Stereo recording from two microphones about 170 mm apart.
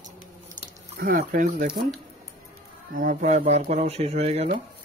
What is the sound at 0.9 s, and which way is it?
Speech, 60° right (ahead or behind).